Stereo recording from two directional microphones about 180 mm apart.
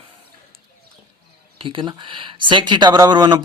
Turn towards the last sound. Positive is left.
turn(degrees=-25)  # may be behind; listen again after turning